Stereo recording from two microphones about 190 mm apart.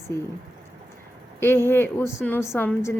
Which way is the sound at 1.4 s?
10° left (ahead or behind).